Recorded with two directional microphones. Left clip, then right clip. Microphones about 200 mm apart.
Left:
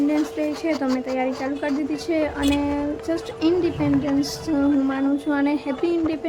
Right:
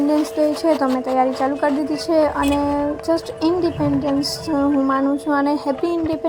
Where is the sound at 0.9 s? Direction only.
5° right (ahead or behind).